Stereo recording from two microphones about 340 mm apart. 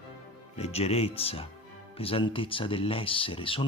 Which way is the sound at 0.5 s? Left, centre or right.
Centre.